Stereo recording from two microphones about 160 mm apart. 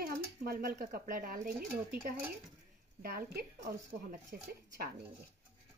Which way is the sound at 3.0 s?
70° right (ahead or behind).